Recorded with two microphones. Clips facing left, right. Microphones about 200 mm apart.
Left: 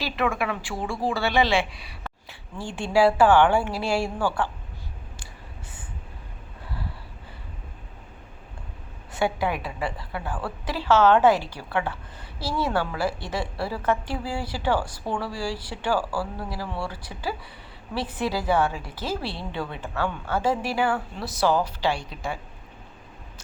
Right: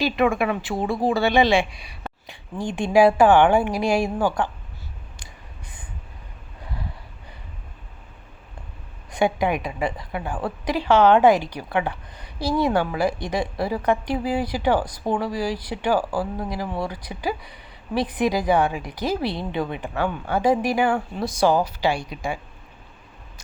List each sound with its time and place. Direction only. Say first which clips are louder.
0.0 s a woman's voice: right 6 dB; 15° right (ahead or behind)
9.1 s a woman's voice: right 4 dB; 20° right (ahead or behind)